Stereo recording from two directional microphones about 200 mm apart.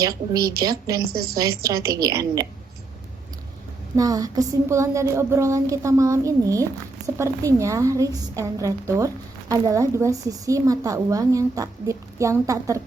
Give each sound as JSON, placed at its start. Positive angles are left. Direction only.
{"t": 0.0, "sound": "a woman's voice", "side_deg": -20}
{"t": 1.1, "sound": "a woman's voice", "side_deg": -50}
{"t": 1.4, "sound": "a woman's voice", "side_deg": -15}
{"t": 3.9, "sound": "a woman's voice", "side_deg": -20}